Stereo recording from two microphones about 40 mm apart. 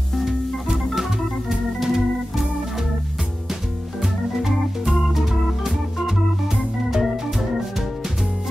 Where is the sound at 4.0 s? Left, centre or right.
Centre.